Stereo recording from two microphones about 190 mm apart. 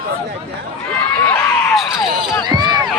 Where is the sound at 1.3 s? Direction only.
5° left (ahead or behind).